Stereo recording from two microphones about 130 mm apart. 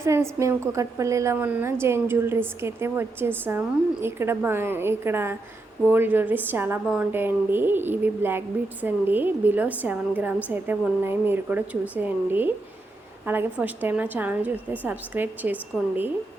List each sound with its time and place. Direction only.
0.0 s a woman's voice: 20° right (ahead or behind)
15.7 s a woman's voice: 5° left (ahead or behind)